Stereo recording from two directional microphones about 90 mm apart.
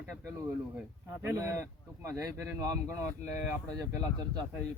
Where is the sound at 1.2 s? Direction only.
30° right (ahead or behind).